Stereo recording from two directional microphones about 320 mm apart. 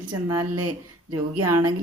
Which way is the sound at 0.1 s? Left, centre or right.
Centre.